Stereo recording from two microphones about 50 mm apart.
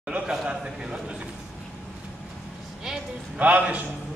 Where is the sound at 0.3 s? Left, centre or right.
Centre.